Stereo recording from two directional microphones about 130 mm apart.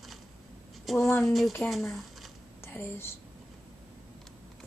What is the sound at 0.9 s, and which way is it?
Speech, centre (ahead or behind).